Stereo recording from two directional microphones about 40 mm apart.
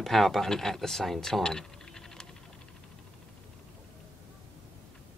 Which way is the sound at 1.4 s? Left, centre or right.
Centre.